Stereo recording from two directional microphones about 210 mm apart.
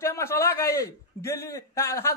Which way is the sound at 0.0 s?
15° left (ahead or behind).